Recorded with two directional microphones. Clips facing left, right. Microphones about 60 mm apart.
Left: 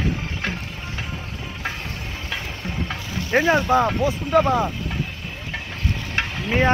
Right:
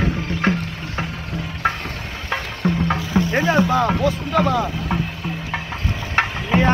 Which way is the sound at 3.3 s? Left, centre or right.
Left.